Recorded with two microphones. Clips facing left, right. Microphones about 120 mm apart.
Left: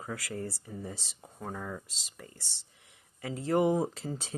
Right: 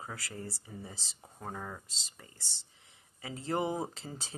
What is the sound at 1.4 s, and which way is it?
Speech, 30° right (ahead or behind).